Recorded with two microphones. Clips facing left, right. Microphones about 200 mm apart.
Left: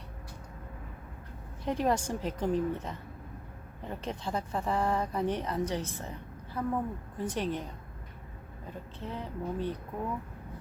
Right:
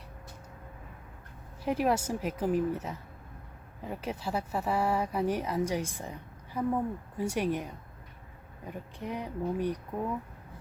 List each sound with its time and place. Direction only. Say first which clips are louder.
1.6 s speech: right 1 dB; 5° right (ahead or behind)